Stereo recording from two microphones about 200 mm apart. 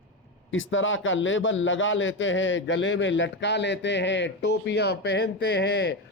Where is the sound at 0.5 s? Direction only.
75° left (ahead or behind).